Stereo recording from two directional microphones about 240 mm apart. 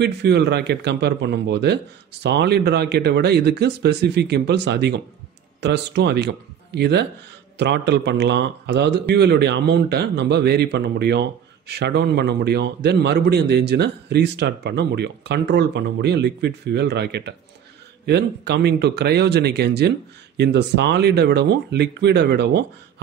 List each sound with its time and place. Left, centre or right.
0.0 s a man's voice: right